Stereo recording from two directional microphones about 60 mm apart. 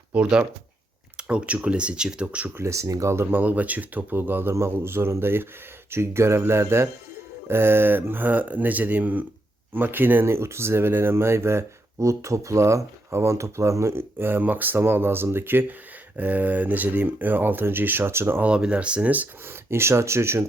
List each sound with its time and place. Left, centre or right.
0.1 s speech: centre
2.6 s speech: right
3.2 s speech: right
10.2 s speech: right
13.9 s speech: right
16.1 s speech: right
18.4 s speech: centre
19.5 s speech: right